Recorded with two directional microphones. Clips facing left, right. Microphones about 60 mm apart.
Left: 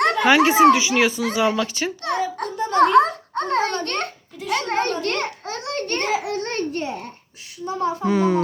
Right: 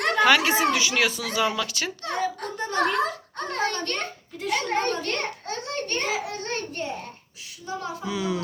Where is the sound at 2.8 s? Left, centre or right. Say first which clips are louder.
Left 10 dB; left.